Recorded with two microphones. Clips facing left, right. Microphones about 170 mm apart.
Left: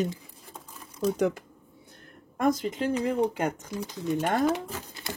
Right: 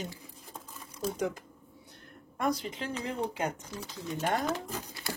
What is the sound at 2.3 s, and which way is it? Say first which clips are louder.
Speech: left 6 dB; 45° left (ahead or behind).